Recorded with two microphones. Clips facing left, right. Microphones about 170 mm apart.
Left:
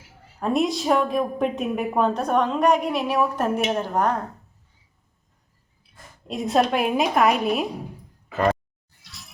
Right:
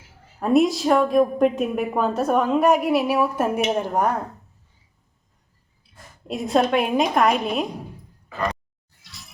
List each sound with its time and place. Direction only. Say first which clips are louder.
0.3 s a woman's voice: right 4 dB; centre (ahead or behind)
6.2 s a woman's voice: right 1 dB; centre (ahead or behind)
9.0 s music: even; centre (ahead or behind)